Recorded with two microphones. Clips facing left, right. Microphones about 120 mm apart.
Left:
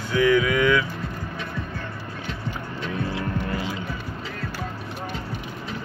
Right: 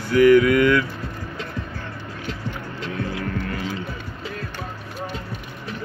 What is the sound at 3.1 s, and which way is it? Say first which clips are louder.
Hum: even; 30° left (ahead or behind).